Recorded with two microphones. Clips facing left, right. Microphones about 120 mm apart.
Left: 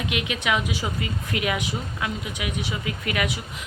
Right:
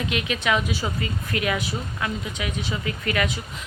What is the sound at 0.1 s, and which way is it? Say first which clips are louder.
Speech: right 1 dB; 15° left (ahead or behind).